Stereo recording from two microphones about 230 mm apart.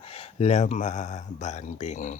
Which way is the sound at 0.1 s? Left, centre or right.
Left.